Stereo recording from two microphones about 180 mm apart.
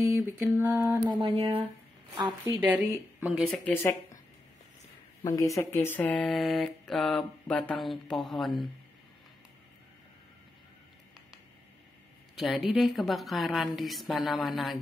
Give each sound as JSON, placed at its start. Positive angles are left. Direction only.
{"t": 0.0, "sound": "mantra", "side_deg": -10}
{"t": 0.9, "sound": "a sound", "side_deg": -20}
{"t": 3.2, "sound": "speech", "side_deg": -5}
{"t": 3.4, "sound": "speech", "side_deg": 5}
{"t": 5.2, "sound": "speech", "side_deg": 15}
{"t": 12.4, "sound": "speech", "side_deg": 0}